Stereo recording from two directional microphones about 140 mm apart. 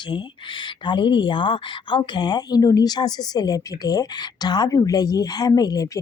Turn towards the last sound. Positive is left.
turn(degrees=25)  # may be behind; listen again after turning